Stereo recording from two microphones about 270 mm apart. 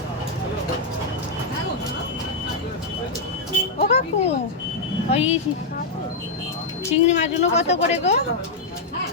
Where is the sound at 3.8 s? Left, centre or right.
Left.